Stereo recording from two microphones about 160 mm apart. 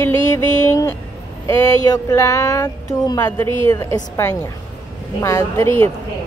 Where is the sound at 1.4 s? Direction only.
20° left (ahead or behind).